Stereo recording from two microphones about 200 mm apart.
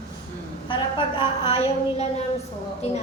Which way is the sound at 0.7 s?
25° left (ahead or behind).